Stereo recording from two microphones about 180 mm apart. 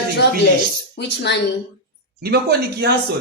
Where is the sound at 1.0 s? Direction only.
75° left (ahead or behind).